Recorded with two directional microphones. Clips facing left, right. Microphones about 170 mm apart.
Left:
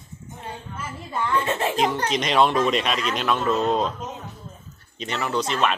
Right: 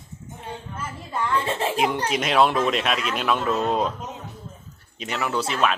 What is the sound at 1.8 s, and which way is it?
Speech, 10° right (ahead or behind).